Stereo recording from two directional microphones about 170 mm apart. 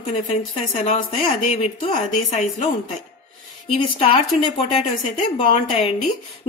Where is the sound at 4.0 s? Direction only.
35° left (ahead or behind).